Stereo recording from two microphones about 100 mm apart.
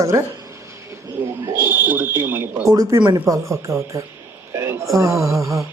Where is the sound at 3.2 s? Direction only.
30° right (ahead or behind).